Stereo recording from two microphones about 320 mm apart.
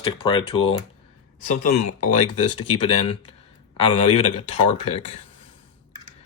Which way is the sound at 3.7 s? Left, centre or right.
Centre.